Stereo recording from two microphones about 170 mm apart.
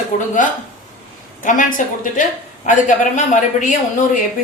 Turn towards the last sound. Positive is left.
turn(degrees=50)  # may be behind; listen again after turning